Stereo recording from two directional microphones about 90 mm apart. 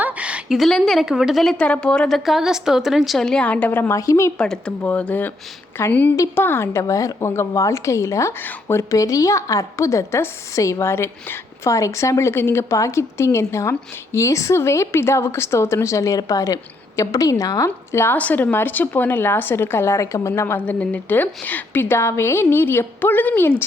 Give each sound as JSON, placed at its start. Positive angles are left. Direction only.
{"t": 0.0, "sound": "a sound", "side_deg": -15}
{"t": 0.5, "sound": "speech", "side_deg": 0}
{"t": 1.5, "sound": "a woman's voice", "side_deg": 10}
{"t": 3.9, "sound": "a woman's voice", "side_deg": 35}
{"t": 4.4, "sound": "a woman's voice", "side_deg": 10}
{"t": 18.2, "sound": "a woman's voice", "side_deg": 15}
{"t": 20.7, "sound": "a woman's voice", "side_deg": 15}